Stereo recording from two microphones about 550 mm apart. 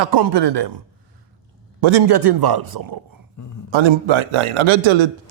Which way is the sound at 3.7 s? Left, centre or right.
Right.